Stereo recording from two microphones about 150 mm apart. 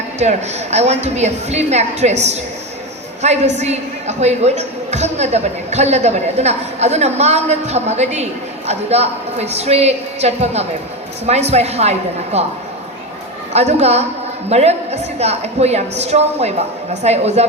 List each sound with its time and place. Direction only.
0.2 s a woman's voice: 50° right (ahead or behind)
13.5 s a woman's voice: 45° right (ahead or behind)